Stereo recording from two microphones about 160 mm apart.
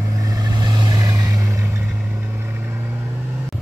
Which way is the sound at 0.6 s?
25° right (ahead or behind).